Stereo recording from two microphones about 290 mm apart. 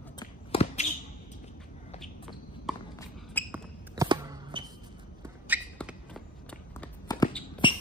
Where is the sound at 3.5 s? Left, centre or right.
Centre.